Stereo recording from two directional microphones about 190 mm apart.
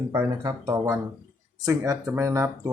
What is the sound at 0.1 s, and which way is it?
Speech, 15° right (ahead or behind).